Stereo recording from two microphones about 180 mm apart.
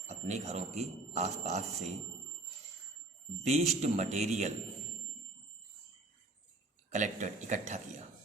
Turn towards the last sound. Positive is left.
turn(degrees=-40)  # may be behind; listen again after turning